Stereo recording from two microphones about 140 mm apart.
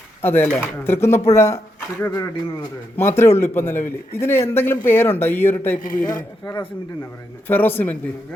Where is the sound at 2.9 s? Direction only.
20° left (ahead or behind).